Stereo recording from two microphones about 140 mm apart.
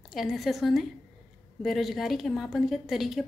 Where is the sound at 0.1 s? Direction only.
Centre (ahead or behind).